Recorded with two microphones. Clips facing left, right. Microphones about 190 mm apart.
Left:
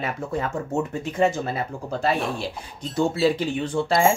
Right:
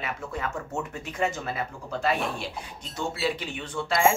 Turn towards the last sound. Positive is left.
turn(degrees=30)  # may be behind; listen again after turning